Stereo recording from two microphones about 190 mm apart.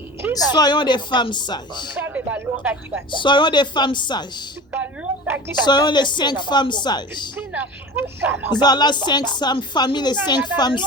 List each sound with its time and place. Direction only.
0.5 s a woman's voice: 20° left (ahead or behind)
2.0 s speech: 10° right (ahead or behind)
3.1 s a woman's voice: 25° left (ahead or behind)
4.7 s a sound: 10° right (ahead or behind)
5.6 s a woman's voice: 25° left (ahead or behind)
7.3 s speech: 10° right (ahead or behind)
8.5 s a woman's voice: 20° left (ahead or behind)